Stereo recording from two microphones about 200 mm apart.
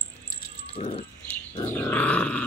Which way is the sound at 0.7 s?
30° left (ahead or behind).